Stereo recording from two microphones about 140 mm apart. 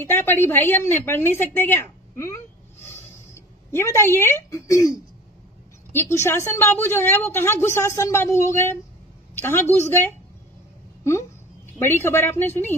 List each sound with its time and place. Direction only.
0.0 s a woman's voice: 15° left (ahead or behind)
5.9 s a woman's voice: 20° left (ahead or behind)
11.8 s a woman's voice: 15° left (ahead or behind)